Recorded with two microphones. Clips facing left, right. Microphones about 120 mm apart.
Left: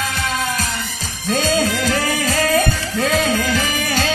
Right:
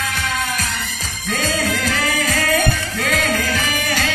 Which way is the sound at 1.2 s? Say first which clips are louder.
Left 4 dB; 30° left (ahead or behind).